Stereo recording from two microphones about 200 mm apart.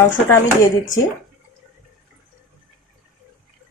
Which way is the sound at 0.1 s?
10° left (ahead or behind).